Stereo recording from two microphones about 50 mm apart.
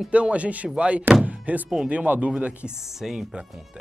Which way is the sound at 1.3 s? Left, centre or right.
Right.